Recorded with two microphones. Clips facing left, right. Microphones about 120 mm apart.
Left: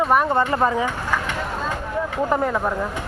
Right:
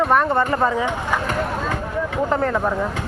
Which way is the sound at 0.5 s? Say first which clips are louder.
Even; 20° left (ahead or behind).